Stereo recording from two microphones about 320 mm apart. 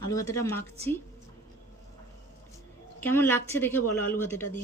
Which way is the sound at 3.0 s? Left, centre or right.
Centre.